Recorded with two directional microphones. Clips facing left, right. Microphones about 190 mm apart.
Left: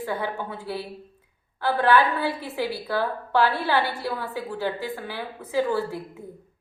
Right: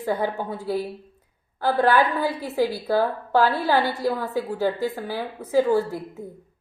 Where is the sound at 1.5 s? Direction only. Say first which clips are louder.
Right 1 dB; 45° right (ahead or behind).